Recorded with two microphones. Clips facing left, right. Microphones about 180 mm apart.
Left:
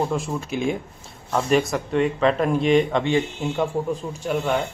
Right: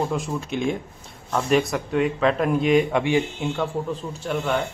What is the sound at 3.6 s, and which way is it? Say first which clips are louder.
A man's voice: left 5 dB; 10° left (ahead or behind).